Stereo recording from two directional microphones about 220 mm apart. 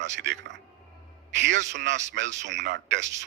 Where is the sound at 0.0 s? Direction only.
55° right (ahead or behind).